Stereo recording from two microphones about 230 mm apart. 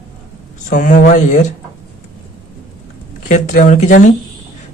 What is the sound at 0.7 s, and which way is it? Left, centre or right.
Speech, left.